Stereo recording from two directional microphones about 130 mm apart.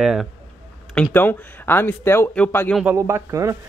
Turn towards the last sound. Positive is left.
turn(degrees=-25)  # may be behind; listen again after turning